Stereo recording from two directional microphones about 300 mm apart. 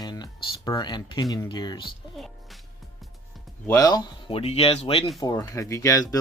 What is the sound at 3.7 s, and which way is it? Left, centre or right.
Speech, centre.